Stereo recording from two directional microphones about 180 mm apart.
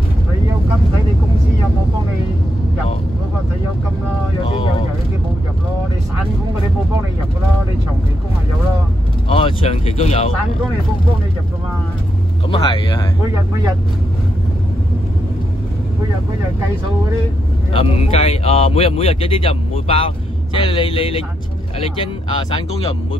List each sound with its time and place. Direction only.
9.3 s vehicle: 30° left (ahead or behind)
12.4 s speech: 30° left (ahead or behind)
17.7 s speech: 35° left (ahead or behind)